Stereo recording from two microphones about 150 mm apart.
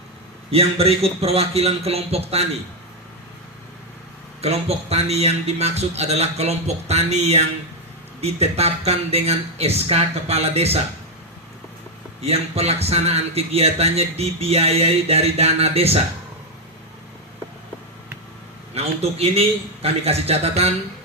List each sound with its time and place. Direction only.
0.5 s speech: 40° right (ahead or behind)
4.4 s speech: 45° right (ahead or behind)
12.2 s speech: 45° right (ahead or behind)
18.7 s speech: 40° right (ahead or behind)